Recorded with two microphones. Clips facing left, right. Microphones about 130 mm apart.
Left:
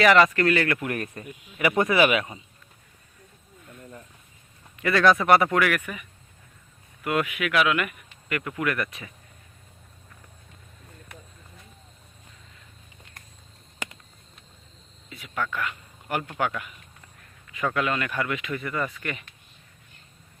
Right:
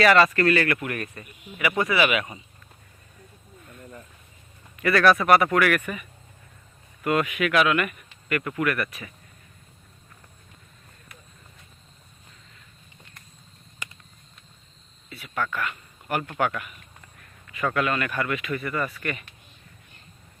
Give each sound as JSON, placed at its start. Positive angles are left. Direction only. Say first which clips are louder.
{"t": 0.0, "sound": "speech", "louder": "even", "side_deg": 15}
{"t": 0.9, "sound": "speech", "louder": "left 2 dB", "side_deg": 30}
{"t": 4.8, "sound": "speech", "louder": "right 1 dB", "side_deg": 20}
{"t": 7.0, "sound": "speech", "louder": "right 2 dB", "side_deg": 10}
{"t": 15.1, "sound": "a sound", "louder": "right 1 dB", "side_deg": 15}
{"t": 16.3, "sound": "speech", "louder": "right 3 dB", "side_deg": 10}
{"t": 17.7, "sound": "speech", "louder": "right 1 dB", "side_deg": 15}